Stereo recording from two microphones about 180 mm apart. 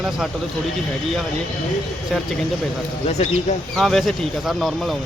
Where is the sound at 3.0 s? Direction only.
40° left (ahead or behind).